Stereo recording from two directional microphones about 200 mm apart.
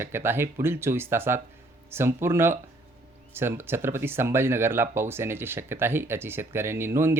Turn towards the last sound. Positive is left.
turn(degrees=-10)  # may be behind; listen again after turning